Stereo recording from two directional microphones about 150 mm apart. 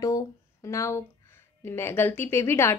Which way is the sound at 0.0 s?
20° left (ahead or behind).